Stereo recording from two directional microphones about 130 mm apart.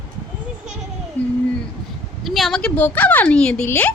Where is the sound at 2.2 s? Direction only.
Centre (ahead or behind).